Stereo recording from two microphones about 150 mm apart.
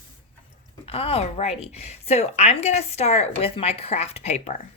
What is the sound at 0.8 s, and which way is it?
A woman's voice, 40° left (ahead or behind).